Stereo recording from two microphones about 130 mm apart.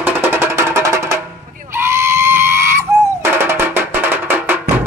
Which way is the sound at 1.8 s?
20° right (ahead or behind).